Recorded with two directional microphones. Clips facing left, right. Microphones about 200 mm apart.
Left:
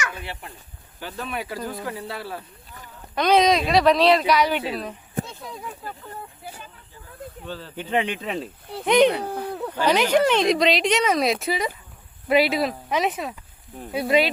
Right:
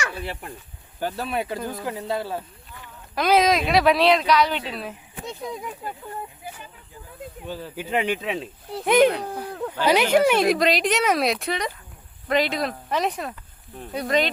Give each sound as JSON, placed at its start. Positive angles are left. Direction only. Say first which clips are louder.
{"t": 0.0, "sound": "speech", "louder": "right 2 dB", "side_deg": -35}
{"t": 3.2, "sound": "speech", "louder": "left 1 dB", "side_deg": -5}
{"t": 5.2, "sound": "speech", "louder": "right 8 dB", "side_deg": -15}
{"t": 7.4, "sound": "speech", "louder": "right 2 dB", "side_deg": -10}